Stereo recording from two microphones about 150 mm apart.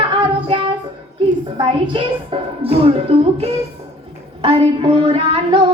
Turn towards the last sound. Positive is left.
turn(degrees=-35)  # may be behind; listen again after turning